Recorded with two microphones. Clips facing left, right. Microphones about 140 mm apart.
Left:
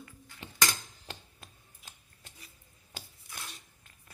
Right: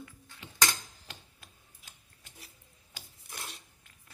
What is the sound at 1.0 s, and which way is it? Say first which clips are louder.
Tick-tock: left 4 dB; 35° left (ahead or behind).